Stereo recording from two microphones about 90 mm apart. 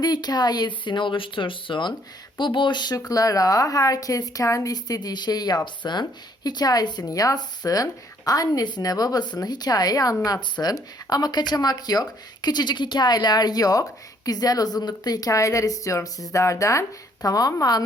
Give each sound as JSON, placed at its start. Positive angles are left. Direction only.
{"t": 0.0, "sound": "a woman's voice", "side_deg": 50}